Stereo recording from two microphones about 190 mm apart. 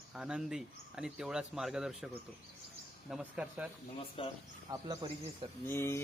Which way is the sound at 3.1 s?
5° right (ahead or behind).